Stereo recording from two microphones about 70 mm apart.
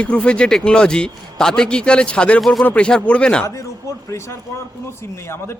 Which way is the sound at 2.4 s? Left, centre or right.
Centre.